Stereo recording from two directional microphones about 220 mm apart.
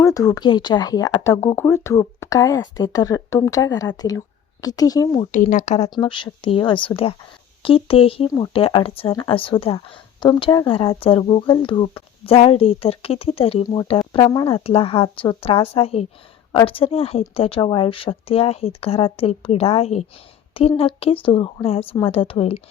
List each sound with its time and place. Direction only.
0.0 s speech: 15° left (ahead or behind)
5.3 s speech: 35° left (ahead or behind)